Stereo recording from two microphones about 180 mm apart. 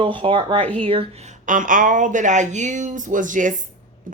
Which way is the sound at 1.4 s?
45° right (ahead or behind).